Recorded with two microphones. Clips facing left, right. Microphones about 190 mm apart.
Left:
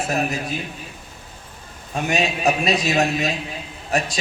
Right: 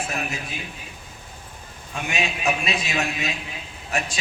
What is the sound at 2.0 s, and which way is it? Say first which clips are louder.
A man's voice: left 5 dB; 40° left (ahead or behind).